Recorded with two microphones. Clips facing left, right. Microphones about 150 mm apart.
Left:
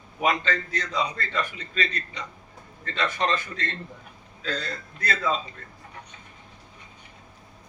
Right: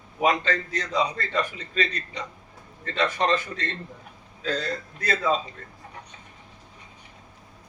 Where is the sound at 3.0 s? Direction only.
35° right (ahead or behind).